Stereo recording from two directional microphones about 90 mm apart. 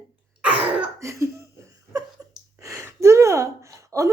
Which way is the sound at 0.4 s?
15° right (ahead or behind).